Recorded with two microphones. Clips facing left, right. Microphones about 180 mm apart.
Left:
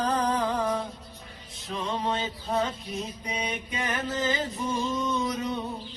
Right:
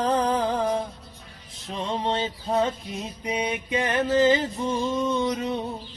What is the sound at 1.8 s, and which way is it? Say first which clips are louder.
Music: right 3 dB; 30° right (ahead or behind).